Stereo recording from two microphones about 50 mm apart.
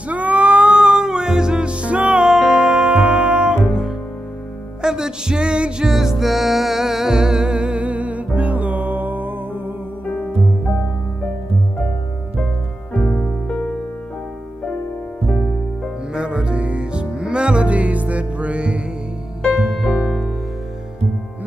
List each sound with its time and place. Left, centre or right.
0.1 s cat: right
0.7 s music: centre
5.9 s music: centre; by 9.6 s right
10.0 s music: left
13.0 s music: left
16.1 s music: centre